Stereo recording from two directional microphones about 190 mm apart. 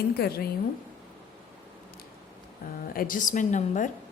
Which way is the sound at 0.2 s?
55° left (ahead or behind).